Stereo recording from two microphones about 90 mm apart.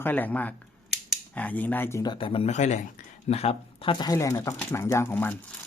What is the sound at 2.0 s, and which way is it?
Speech, 60° left (ahead or behind).